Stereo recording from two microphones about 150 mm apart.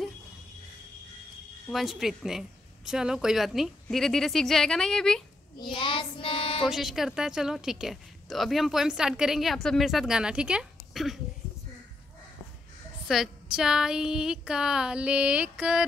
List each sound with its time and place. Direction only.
1.7 s a woman's voice: centre (ahead or behind)
5.6 s child singing: 30° left (ahead or behind)
6.6 s a woman's voice: centre (ahead or behind)
13.0 s a woman's voice: 5° right (ahead or behind)